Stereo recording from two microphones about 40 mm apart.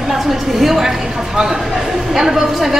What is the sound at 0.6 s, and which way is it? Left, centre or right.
Speech, centre.